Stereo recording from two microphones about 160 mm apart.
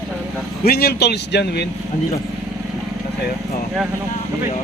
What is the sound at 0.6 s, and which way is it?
Speech, 75° left (ahead or behind).